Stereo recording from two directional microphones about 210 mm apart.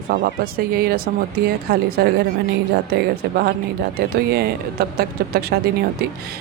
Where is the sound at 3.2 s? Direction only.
50° right (ahead or behind).